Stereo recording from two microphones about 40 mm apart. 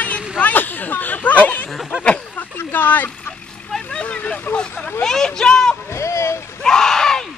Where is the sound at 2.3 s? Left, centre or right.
Left.